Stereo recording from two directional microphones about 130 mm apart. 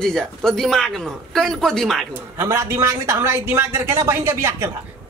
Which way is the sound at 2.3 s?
20° right (ahead or behind).